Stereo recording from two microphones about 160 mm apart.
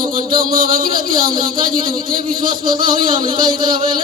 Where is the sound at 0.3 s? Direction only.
60° right (ahead or behind).